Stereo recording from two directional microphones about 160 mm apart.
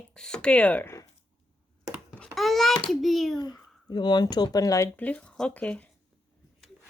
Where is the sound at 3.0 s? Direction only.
Centre (ahead or behind).